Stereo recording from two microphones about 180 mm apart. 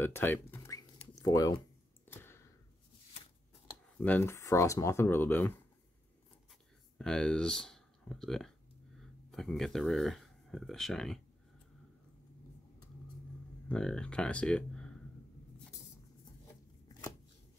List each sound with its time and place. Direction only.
0.0 s a sound: 10° left (ahead or behind)
4.0 s speech: 10° left (ahead or behind)
7.0 s speech: 5° left (ahead or behind)
13.7 s speech: 5° left (ahead or behind)